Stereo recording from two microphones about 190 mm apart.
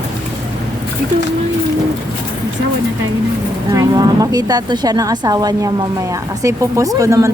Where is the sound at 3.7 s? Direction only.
20° right (ahead or behind).